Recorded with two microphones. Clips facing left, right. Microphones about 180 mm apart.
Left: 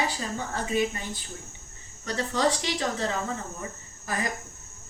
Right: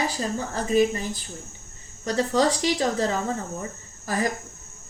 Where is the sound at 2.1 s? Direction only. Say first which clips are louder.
Right 4 dB; 40° right (ahead or behind).